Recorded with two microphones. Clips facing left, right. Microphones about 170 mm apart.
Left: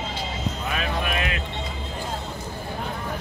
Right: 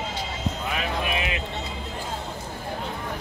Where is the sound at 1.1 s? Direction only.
20° right (ahead or behind).